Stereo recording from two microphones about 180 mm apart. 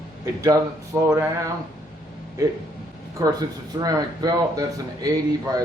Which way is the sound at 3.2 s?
20° right (ahead or behind).